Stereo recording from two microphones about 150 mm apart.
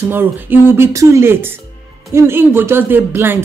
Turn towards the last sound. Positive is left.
turn(degrees=-15)  # may be behind; listen again after turning